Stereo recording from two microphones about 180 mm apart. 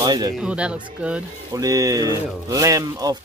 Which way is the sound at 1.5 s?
20° right (ahead or behind).